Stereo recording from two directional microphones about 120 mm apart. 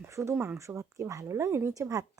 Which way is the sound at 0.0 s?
25° right (ahead or behind).